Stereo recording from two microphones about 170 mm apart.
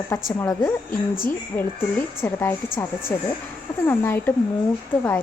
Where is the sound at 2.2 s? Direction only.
15° left (ahead or behind).